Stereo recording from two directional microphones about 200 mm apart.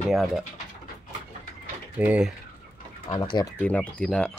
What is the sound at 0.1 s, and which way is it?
Speech, centre (ahead or behind).